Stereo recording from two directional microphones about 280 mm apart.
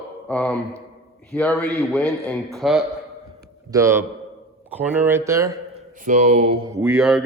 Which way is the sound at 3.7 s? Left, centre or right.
Centre.